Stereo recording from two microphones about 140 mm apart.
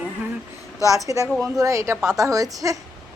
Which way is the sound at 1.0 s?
25° right (ahead or behind).